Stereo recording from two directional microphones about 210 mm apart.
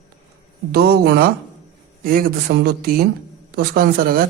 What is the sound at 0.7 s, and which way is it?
Speech, 50° right (ahead or behind).